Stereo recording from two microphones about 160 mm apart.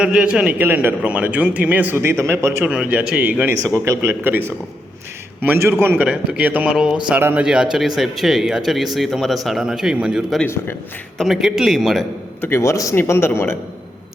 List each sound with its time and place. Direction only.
0.0 s a man's voice: 5° right (ahead or behind)
10.4 s a man's voice: 15° left (ahead or behind)
11.2 s speech: centre (ahead or behind)
12.4 s a man's voice: 15° left (ahead or behind)